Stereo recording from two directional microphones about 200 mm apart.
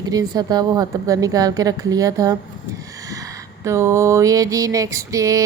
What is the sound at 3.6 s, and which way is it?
Speech, 15° right (ahead or behind).